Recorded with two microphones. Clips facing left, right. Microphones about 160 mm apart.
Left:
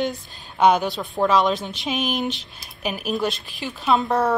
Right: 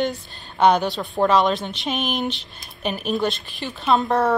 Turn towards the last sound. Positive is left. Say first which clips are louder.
# right 1 dB
turn(degrees=0)  # may be behind; listen again after turning